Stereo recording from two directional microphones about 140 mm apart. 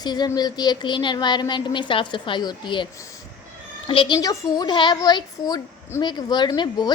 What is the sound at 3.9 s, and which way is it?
Speech, 40° left (ahead or behind).